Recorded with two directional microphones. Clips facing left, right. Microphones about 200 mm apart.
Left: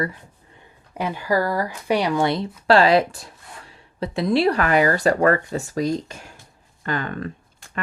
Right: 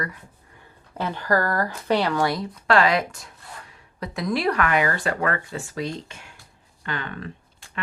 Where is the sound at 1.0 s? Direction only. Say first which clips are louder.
Left 1 dB; 10° left (ahead or behind).